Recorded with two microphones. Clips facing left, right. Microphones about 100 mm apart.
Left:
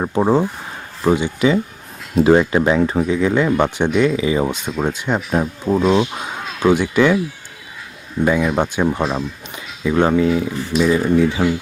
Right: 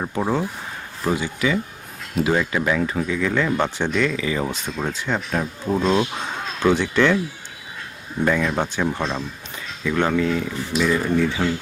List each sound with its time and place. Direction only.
0.0 s speech: 25° left (ahead or behind); by 7.2 s 10° left (ahead or behind)
8.2 s speech: 10° left (ahead or behind)